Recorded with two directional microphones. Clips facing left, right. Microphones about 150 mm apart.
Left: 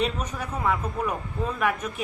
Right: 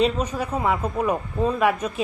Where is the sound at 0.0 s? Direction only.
30° right (ahead or behind).